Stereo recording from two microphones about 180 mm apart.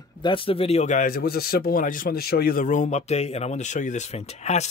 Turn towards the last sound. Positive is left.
turn(degrees=40)  # may be behind; listen again after turning